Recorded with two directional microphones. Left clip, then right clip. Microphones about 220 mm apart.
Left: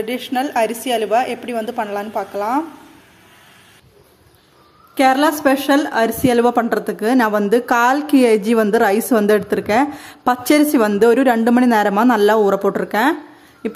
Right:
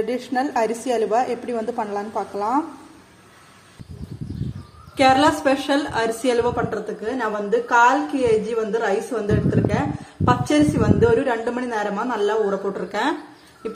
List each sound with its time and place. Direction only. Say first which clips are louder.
0.0 s a woman's voice: left 2 dB; centre (ahead or behind)
4.9 s a woman's voice: left 2 dB; 30° left (ahead or behind)